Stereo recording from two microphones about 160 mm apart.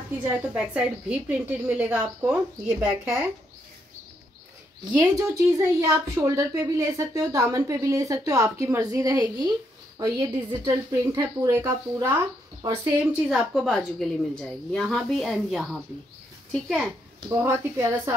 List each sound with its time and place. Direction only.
0.7 s a woman's voice: 10° right (ahead or behind)
4.9 s a woman's voice: 20° right (ahead or behind)
13.3 s a woman's voice: centre (ahead or behind)
17.3 s a woman's voice: 15° right (ahead or behind)